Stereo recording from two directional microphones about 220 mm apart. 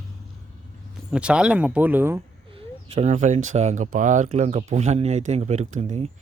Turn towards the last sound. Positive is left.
turn(degrees=-35)  # may be behind; listen again after turning